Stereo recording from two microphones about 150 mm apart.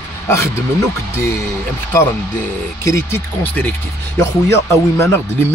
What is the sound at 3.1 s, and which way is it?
Speech, 15° left (ahead or behind).